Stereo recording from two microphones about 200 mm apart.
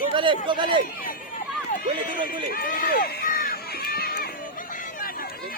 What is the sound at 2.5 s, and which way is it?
Run, 45° left (ahead or behind).